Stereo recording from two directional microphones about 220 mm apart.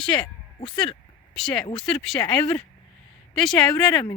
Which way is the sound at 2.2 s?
20° left (ahead or behind).